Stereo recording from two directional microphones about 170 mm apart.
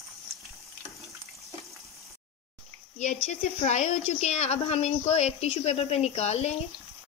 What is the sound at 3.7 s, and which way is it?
A woman's voice, 40° left (ahead or behind).